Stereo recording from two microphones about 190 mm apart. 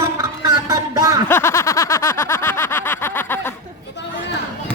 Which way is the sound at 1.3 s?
15° left (ahead or behind).